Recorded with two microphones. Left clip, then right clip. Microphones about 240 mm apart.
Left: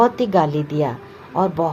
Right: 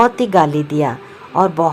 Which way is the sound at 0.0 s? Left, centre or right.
Right.